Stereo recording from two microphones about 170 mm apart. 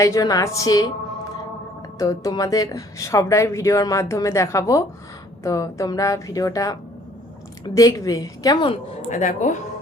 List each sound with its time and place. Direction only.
0.0 s speech: 20° left (ahead or behind)
2.0 s speech: 20° left (ahead or behind)
8.7 s speech: 45° left (ahead or behind)